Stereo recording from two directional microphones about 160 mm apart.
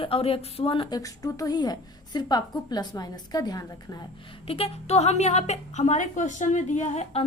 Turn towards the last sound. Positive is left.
turn(degrees=45)  # may be behind; listen again after turning